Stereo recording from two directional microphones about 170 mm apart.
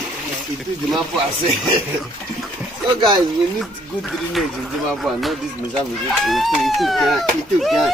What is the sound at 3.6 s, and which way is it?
Speech, centre (ahead or behind).